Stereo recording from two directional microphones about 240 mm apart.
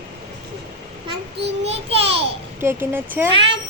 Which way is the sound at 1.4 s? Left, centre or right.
Right.